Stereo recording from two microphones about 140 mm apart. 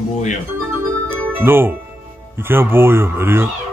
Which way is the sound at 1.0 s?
15° right (ahead or behind).